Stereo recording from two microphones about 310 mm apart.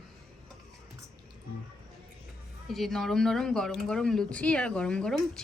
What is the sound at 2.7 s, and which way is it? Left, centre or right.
Speech, centre.